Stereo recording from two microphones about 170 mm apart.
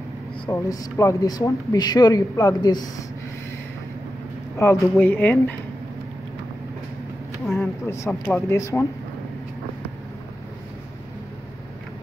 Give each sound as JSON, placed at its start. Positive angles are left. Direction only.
{"t": 0.5, "sound": "speech", "side_deg": 20}
{"t": 4.6, "sound": "speech", "side_deg": 15}
{"t": 7.4, "sound": "a sound", "side_deg": 0}
{"t": 8.3, "sound": "speech", "side_deg": 15}